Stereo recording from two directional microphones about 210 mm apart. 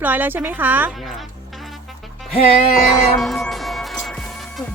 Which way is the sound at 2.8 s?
Centre (ahead or behind).